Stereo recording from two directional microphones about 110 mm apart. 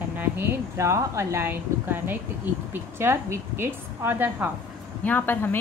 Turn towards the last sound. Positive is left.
turn(degrees=20)  # may be behind; listen again after turning